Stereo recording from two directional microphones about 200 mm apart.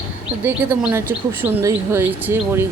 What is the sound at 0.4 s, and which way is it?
Speech, 10° right (ahead or behind).